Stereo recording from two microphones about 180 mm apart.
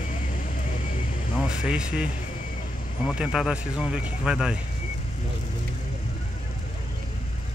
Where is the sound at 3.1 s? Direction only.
5° right (ahead or behind).